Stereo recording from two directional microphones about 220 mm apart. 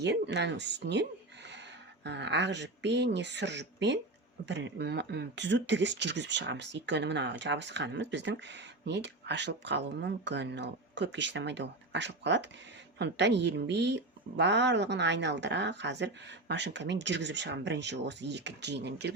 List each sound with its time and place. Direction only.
0.0 s speech: 50° right (ahead or behind)
2.0 s speech: 50° right (ahead or behind)